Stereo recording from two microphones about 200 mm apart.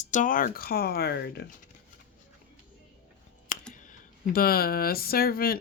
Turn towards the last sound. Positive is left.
turn(degrees=50)  # may be behind; listen again after turning